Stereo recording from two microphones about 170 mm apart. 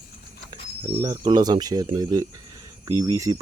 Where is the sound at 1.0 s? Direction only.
20° right (ahead or behind).